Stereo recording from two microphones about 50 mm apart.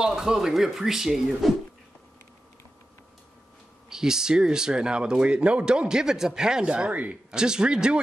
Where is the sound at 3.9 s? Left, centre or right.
Centre; by 7.2 s right.